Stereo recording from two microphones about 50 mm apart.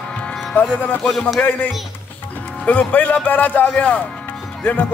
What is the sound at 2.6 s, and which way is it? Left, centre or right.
Speech, left.